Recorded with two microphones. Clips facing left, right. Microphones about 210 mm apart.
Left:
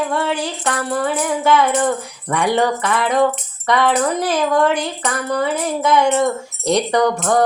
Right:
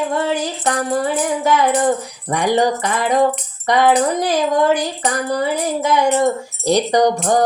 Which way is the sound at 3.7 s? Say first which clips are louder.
Right 2 dB; 35° right (ahead or behind).